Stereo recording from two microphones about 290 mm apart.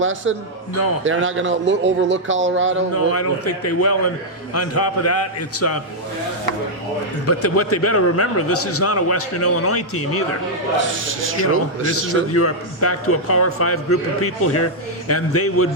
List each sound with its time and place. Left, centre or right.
0.0 s a man's voice: right
2.9 s a man's voice: left
7.3 s a man's voice: left
11.9 s a man's voice: left